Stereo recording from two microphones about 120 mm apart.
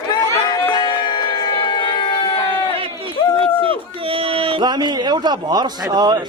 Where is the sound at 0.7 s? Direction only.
35° left (ahead or behind).